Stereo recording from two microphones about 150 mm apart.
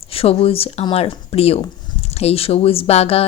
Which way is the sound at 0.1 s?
40° left (ahead or behind).